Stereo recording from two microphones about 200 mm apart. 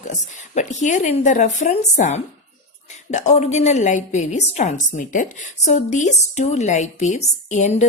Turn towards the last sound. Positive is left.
turn(degrees=35)  # may be behind; listen again after turning